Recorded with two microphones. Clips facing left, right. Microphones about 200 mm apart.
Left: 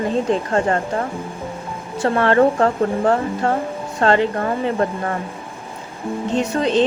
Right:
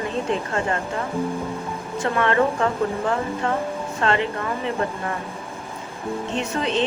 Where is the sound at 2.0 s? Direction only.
35° left (ahead or behind).